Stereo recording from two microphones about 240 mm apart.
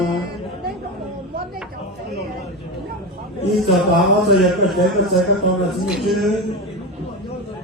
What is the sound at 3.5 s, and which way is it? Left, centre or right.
A man's voice, centre.